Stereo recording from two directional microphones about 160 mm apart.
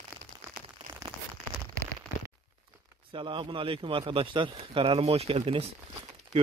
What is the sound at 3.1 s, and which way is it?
A man's voice, 30° right (ahead or behind).